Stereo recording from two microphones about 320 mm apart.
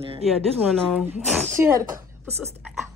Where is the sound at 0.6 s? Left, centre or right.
Centre.